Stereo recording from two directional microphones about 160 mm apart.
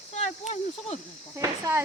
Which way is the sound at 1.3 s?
15° right (ahead or behind).